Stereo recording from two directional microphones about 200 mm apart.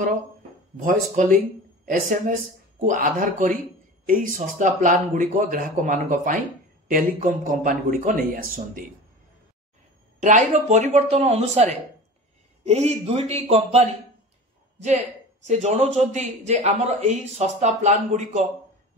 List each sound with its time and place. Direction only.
0.8 s a man's voice: 40° right (ahead or behind)
10.2 s a man's voice: 35° right (ahead or behind)
15.4 s a man's voice: 35° right (ahead or behind)